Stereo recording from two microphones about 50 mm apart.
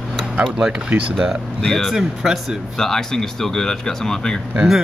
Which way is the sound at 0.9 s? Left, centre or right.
Right.